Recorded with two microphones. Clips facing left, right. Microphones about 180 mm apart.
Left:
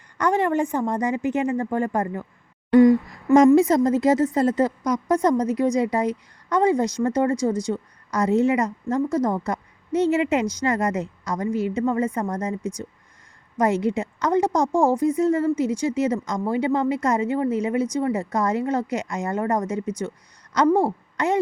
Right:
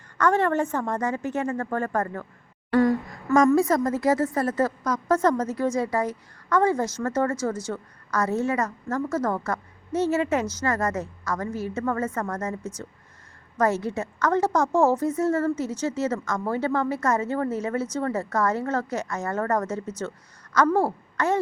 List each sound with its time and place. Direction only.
0.2 s a woman's voice: 15° left (ahead or behind)